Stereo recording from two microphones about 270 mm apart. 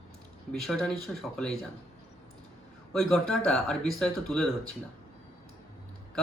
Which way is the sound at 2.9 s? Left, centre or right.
Centre.